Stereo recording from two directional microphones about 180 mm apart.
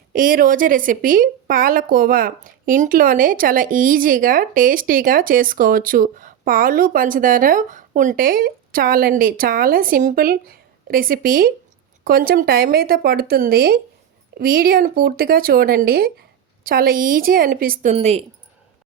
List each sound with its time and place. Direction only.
0.1 s a woman's voice: 50° right (ahead or behind)
17.9 s speech: 35° right (ahead or behind)